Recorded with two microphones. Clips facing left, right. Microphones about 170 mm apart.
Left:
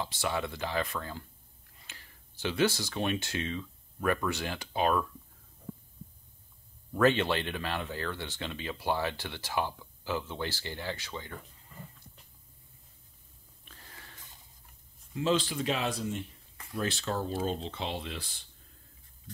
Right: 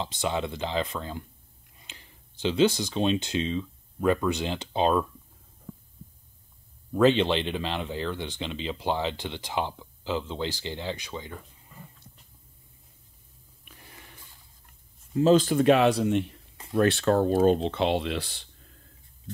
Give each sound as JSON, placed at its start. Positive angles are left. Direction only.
{"t": 0.0, "sound": "speech", "side_deg": -20}
{"t": 6.9, "sound": "speech", "side_deg": -20}
{"t": 13.7, "sound": "a sound", "side_deg": -15}
{"t": 15.1, "sound": "speech", "side_deg": -40}